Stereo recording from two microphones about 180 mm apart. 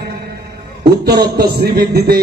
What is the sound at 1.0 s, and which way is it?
Speech, 65° right (ahead or behind).